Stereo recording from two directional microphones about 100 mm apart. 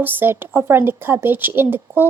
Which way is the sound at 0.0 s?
20° right (ahead or behind).